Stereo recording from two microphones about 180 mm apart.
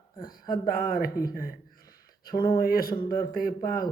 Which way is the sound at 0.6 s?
55° left (ahead or behind).